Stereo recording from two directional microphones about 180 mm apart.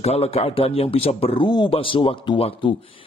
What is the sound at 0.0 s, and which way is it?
A man's voice, 35° left (ahead or behind).